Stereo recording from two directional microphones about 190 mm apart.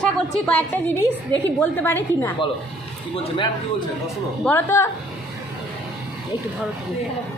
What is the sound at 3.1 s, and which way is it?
Speech, 25° left (ahead or behind).